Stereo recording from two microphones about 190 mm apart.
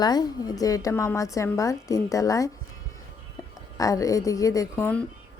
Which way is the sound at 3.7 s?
15° left (ahead or behind).